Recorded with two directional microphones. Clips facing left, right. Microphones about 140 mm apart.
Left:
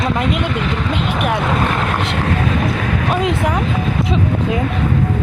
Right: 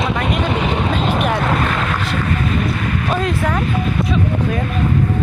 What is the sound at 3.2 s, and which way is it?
Speech, 15° left (ahead or behind).